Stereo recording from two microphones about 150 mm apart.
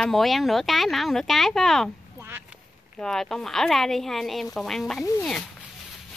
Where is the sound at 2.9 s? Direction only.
5° left (ahead or behind).